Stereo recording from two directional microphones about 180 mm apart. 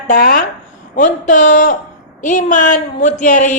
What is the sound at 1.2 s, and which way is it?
Howl, 40° left (ahead or behind).